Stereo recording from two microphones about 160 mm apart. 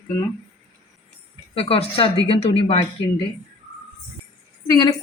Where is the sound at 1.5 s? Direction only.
35° left (ahead or behind).